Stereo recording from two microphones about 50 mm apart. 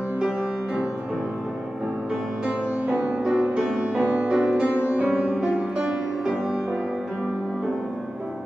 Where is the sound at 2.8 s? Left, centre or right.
Right.